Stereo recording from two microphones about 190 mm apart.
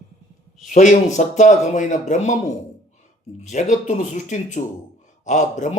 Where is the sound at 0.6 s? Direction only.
40° left (ahead or behind).